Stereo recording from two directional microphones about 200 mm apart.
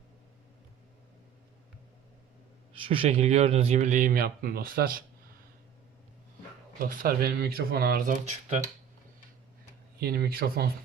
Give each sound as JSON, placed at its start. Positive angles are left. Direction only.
{"t": 2.7, "sound": "speech", "side_deg": -25}
{"t": 6.7, "sound": "speech", "side_deg": -45}
{"t": 10.0, "sound": "speech", "side_deg": -50}